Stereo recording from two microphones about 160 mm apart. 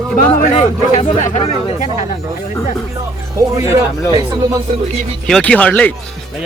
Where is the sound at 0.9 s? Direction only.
45° left (ahead or behind).